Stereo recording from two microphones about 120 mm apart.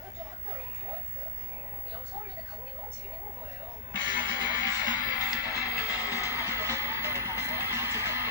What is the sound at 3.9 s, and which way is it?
Music, 40° right (ahead or behind).